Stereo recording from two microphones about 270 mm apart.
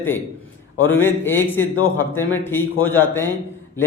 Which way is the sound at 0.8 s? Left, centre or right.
Centre.